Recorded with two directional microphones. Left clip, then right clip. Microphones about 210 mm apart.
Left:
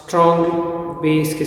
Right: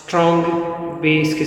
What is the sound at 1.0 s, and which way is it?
Mantra, 5° left (ahead or behind).